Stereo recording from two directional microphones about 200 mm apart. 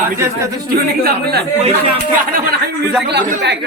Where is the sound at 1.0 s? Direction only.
55° right (ahead or behind).